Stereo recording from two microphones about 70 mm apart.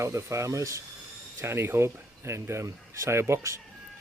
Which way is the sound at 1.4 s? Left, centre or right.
Right.